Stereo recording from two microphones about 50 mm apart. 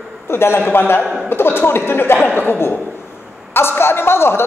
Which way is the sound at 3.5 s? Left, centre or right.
Left.